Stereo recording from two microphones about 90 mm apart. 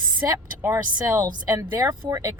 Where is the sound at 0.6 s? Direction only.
30° right (ahead or behind).